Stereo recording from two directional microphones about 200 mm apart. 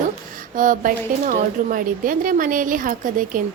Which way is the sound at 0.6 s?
40° right (ahead or behind).